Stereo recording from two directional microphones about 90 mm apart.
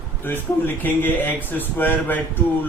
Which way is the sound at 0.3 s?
20° left (ahead or behind).